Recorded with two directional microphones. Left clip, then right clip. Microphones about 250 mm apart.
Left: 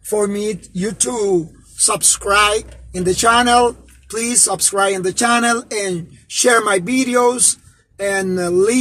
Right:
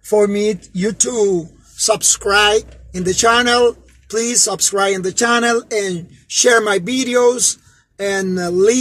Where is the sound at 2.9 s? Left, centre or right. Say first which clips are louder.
Even; centre.